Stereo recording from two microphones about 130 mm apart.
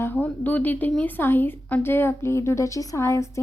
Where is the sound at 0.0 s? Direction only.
15° left (ahead or behind).